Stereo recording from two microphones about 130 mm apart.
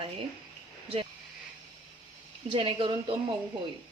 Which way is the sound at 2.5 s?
40° right (ahead or behind).